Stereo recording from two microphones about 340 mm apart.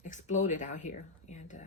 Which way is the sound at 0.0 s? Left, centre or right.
Left.